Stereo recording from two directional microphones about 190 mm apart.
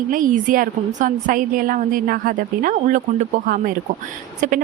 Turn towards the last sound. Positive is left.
turn(degrees=-40)  # may be behind; listen again after turning